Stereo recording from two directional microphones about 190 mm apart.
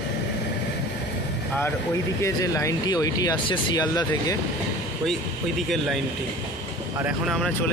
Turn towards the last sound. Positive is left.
turn(degrees=0)  # may be behind; listen again after turning